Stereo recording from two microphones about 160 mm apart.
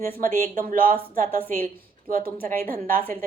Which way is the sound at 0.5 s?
55° right (ahead or behind).